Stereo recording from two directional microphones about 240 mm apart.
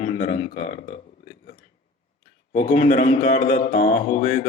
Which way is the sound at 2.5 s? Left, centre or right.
Left.